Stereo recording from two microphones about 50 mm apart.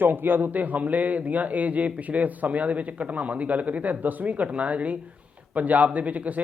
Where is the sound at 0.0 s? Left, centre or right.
Right.